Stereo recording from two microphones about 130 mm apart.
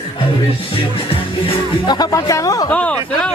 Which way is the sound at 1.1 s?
45° left (ahead or behind).